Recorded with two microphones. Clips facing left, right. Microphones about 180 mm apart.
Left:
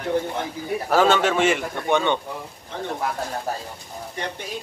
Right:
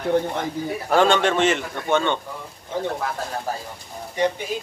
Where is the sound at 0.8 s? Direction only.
5° left (ahead or behind).